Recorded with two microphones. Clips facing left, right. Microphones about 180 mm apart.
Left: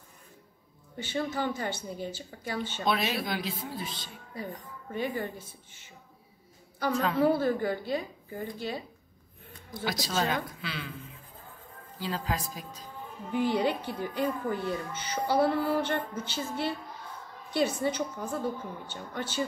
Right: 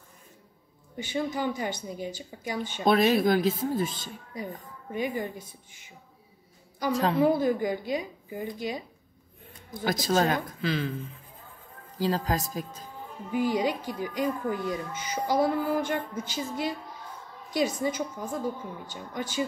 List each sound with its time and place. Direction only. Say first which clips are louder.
1.0 s speech: right 2 dB; 15° right (ahead or behind)
2.8 s speech: right 9 dB; 45° right (ahead or behind)
4.9 s speech: right 2 dB; 15° right (ahead or behind)
6.9 s speech: right 3 dB; 35° right (ahead or behind)
7.2 s speech: right 1 dB; 15° right (ahead or behind)
9.8 s speech: right 5 dB; 50° right (ahead or behind)
12.0 s speech: right 6 dB; 40° right (ahead or behind)
13.3 s speech: right 1 dB; 10° right (ahead or behind)